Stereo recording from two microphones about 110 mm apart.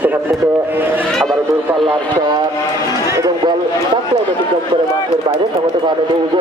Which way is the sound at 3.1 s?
30° right (ahead or behind).